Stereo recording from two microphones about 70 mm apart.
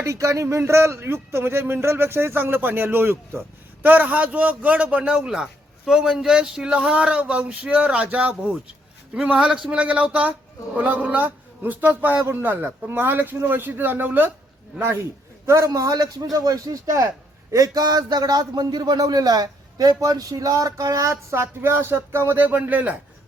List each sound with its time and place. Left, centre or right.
0.0 s a man's voice: right
17.5 s a man's voice: right
22.4 s a man's voice: right